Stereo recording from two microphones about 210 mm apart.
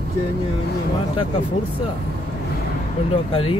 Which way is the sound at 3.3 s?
25° left (ahead or behind).